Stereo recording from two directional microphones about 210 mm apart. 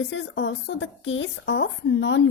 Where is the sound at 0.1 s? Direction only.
60° left (ahead or behind).